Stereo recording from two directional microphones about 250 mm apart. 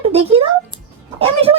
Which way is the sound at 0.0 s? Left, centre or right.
Right.